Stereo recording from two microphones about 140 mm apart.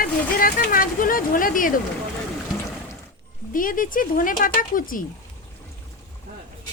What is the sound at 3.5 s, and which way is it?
Speech, 75° left (ahead or behind).